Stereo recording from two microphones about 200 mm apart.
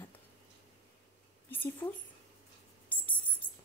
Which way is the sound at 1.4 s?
10° left (ahead or behind).